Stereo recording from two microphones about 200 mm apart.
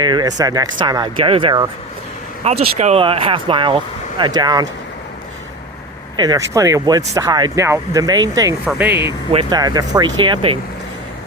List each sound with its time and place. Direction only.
0.0 s speech: 20° right (ahead or behind)
6.1 s speech: 20° right (ahead or behind)
9.3 s speech: 25° right (ahead or behind)